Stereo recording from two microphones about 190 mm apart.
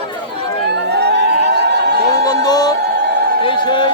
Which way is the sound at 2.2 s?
20° left (ahead or behind).